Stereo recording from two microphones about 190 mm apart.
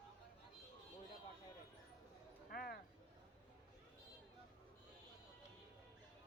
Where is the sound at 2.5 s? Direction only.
55° left (ahead or behind).